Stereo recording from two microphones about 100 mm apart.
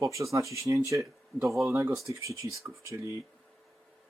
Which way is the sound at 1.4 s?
Centre (ahead or behind).